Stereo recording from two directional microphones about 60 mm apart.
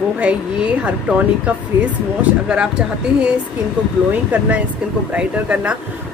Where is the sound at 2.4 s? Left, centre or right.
Centre.